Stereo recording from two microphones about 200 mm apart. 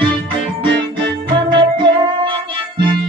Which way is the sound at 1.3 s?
25° right (ahead or behind).